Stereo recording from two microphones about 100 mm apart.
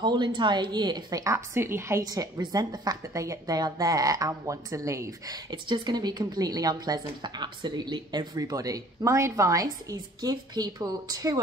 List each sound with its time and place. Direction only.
0.0 s a woman's voice: 50° right (ahead or behind)
1.2 s a woman's voice: 25° right (ahead or behind)
2.0 s a woman's voice: 40° right (ahead or behind)